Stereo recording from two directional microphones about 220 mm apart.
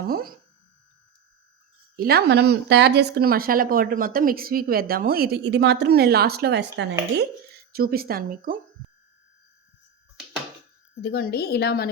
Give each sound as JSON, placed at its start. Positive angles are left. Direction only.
{"t": 0.1, "sound": "speech", "side_deg": -40}
{"t": 2.0, "sound": "speech", "side_deg": -45}
{"t": 11.0, "sound": "a woman's voice", "side_deg": 45}